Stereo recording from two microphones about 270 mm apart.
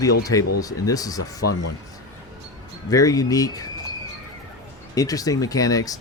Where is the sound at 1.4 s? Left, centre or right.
Left.